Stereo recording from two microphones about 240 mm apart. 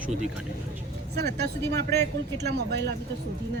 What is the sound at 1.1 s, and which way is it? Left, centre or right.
Speech, right.